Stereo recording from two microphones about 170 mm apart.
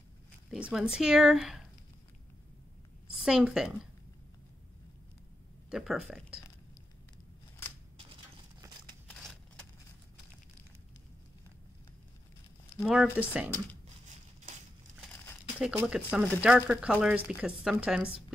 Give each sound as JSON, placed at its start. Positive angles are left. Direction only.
{"t": 0.5, "sound": "speech", "side_deg": -5}
{"t": 3.2, "sound": "speech", "side_deg": -5}
{"t": 5.7, "sound": "speech", "side_deg": -5}
{"t": 9.0, "sound": "a sound", "side_deg": 5}
{"t": 12.8, "sound": "speech", "side_deg": -5}
{"t": 15.7, "sound": "speech", "side_deg": -10}